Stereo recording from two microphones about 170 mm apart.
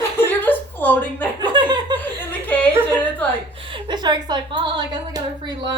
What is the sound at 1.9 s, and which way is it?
Chuckle, 10° left (ahead or behind).